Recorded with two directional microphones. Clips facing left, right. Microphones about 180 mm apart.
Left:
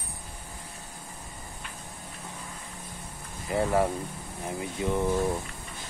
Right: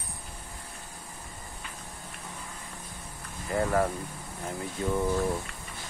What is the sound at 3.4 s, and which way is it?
Speech, 20° left (ahead or behind).